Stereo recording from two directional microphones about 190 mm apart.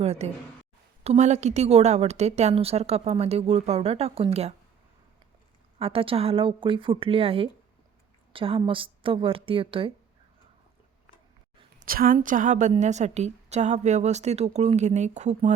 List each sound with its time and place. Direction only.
0.0 s a woman's voice: 35° right (ahead or behind)
5.8 s a woman's voice: 30° right (ahead or behind)
11.8 s a woman's voice: 50° right (ahead or behind)